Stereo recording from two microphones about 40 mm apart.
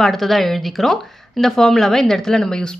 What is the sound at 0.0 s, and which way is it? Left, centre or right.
A woman's voice, centre.